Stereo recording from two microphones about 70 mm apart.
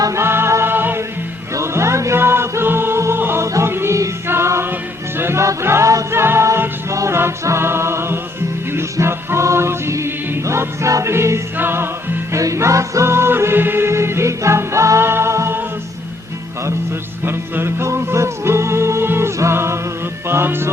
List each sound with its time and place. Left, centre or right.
0.2 s music: right
1.5 s music: right
6.1 s music: right
12.3 s music: right
17.2 s music: right